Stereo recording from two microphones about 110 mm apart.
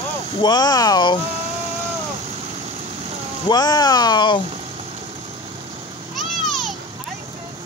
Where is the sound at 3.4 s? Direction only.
40° left (ahead or behind).